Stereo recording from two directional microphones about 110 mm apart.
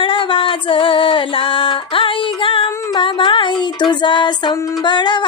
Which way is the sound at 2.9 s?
50° left (ahead or behind).